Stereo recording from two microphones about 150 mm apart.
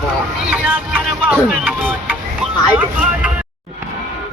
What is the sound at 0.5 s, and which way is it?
Music, 10° right (ahead or behind).